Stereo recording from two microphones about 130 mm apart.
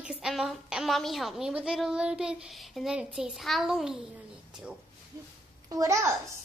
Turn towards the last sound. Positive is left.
turn(degrees=-25)  # may be behind; listen again after turning